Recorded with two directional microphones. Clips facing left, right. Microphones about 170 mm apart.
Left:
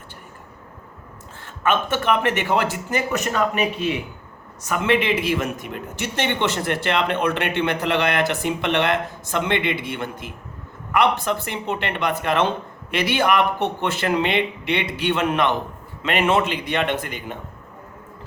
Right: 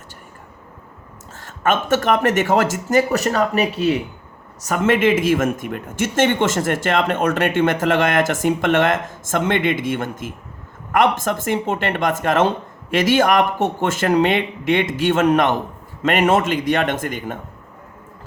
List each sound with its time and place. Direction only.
1.4 s speech: 45° right (ahead or behind)